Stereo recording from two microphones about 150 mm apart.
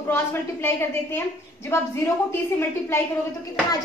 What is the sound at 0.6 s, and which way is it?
A woman's voice, 15° left (ahead or behind).